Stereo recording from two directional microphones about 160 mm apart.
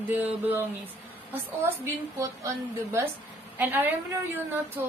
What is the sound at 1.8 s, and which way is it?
Speech, 20° right (ahead or behind).